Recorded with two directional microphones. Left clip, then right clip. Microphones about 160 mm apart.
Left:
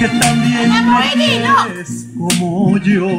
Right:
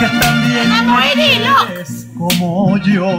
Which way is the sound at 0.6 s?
Centre (ahead or behind).